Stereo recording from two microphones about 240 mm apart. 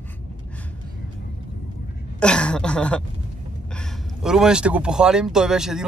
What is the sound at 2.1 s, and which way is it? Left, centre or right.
Speech, centre.